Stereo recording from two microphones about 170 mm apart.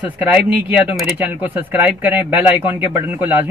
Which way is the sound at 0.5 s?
10° right (ahead or behind).